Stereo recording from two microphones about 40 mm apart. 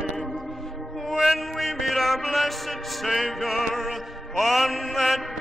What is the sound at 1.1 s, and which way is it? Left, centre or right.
Music, centre.